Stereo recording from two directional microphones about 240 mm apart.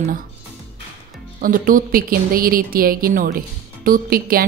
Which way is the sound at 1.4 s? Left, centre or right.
Right.